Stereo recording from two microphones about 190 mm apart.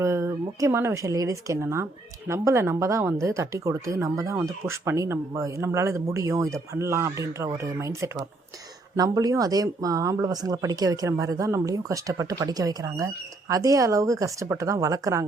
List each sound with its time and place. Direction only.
0.0 s speech: 15° right (ahead or behind)